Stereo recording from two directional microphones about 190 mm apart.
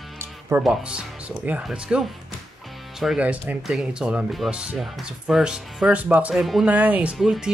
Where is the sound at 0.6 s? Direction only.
5° right (ahead or behind).